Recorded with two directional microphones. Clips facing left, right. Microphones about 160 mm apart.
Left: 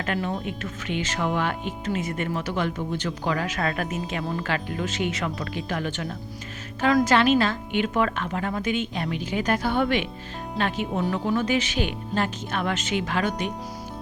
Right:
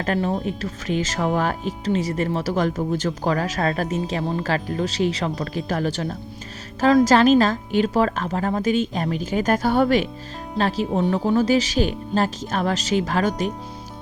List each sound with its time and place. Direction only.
0.0 s speech: 35° right (ahead or behind)